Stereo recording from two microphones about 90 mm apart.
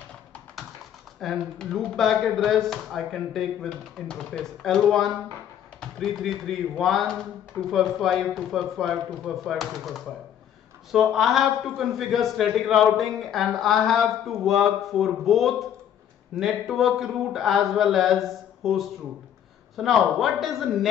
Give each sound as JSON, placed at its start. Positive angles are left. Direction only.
{"t": 1.2, "sound": "a man's voice", "side_deg": 5}